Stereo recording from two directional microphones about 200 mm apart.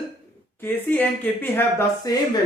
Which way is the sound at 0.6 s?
10° left (ahead or behind).